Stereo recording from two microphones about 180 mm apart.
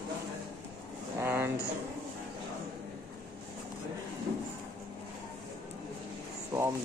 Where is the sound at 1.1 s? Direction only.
15° right (ahead or behind).